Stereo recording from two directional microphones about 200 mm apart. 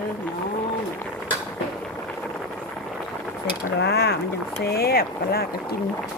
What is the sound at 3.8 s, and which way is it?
Speech, 55° left (ahead or behind).